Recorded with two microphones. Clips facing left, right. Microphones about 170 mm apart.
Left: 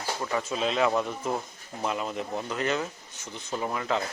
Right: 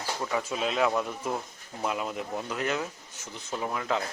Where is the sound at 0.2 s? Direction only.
5° right (ahead or behind).